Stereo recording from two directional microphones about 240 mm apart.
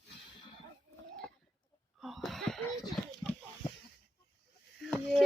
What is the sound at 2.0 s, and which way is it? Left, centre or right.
Wheeze, centre.